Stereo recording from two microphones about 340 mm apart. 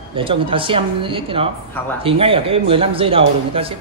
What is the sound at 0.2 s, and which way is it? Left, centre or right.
Speech, centre.